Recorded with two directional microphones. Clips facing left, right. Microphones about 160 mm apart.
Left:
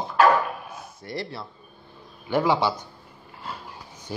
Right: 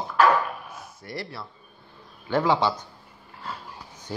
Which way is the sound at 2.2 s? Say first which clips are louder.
Even; 10° left (ahead or behind).